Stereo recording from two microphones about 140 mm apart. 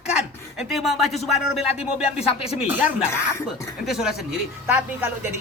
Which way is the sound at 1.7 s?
45° left (ahead or behind).